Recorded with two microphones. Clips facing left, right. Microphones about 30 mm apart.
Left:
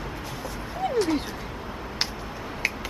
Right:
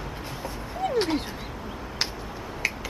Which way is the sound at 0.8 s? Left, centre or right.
Centre.